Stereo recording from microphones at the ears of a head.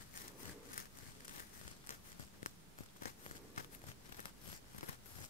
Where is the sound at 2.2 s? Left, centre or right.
Left.